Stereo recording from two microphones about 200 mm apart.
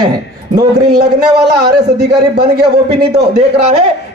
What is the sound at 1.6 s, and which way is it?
A man's voice, 50° right (ahead or behind).